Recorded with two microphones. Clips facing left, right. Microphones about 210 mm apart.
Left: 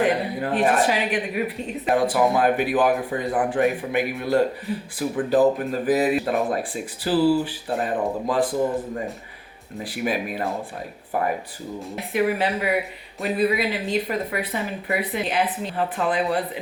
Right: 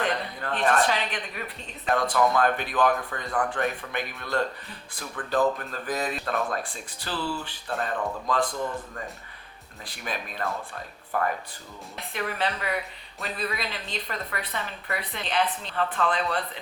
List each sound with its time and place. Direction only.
0.0 s speech: 10° left (ahead or behind)
7.7 s speech: 15° left (ahead or behind)
8.3 s speech: 5° left (ahead or behind)
8.7 s speech: 15° left (ahead or behind)